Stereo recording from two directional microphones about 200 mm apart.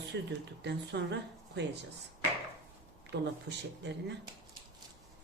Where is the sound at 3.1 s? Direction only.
60° right (ahead or behind).